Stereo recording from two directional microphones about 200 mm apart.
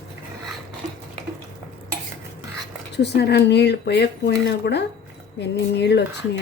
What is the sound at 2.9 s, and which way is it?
Speech, 55° left (ahead or behind).